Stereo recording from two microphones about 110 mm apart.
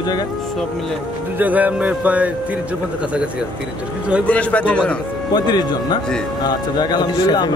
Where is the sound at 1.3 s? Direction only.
15° right (ahead or behind).